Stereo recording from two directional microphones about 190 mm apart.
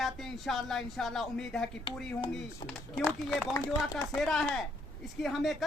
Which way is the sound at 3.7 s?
Centre (ahead or behind).